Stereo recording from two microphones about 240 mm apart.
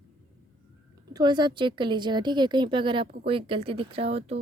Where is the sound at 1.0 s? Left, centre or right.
Centre.